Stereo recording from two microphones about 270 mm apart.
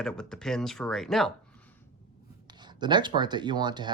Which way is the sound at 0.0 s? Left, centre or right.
Centre.